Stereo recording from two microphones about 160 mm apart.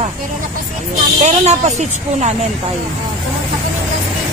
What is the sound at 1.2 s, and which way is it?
A woman's voice, 45° right (ahead or behind).